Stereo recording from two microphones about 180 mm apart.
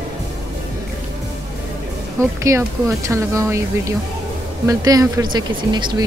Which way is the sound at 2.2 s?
15° right (ahead or behind).